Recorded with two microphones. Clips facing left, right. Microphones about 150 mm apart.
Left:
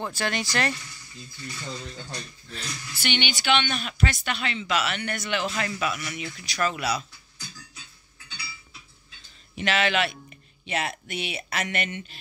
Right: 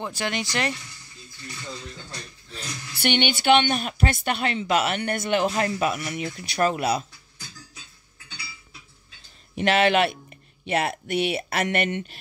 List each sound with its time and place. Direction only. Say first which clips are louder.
0.0 s speech: even; 20° right (ahead or behind)
3.0 s speech: right 6 dB; 55° right (ahead or behind)
9.6 s speech: right 5 dB; 55° right (ahead or behind)